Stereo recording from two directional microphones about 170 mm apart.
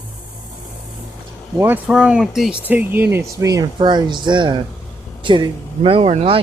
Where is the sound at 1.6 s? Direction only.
10° right (ahead or behind).